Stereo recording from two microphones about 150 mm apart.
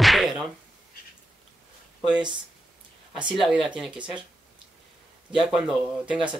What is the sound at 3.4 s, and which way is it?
Speech, 5° right (ahead or behind).